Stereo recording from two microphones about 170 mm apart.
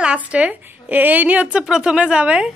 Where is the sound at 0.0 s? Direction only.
5° right (ahead or behind).